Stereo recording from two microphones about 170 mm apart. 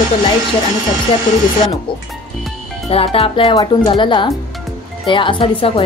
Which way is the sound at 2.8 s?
35° left (ahead or behind).